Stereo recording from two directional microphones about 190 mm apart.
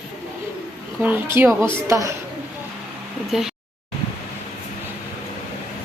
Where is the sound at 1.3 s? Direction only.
15° right (ahead or behind).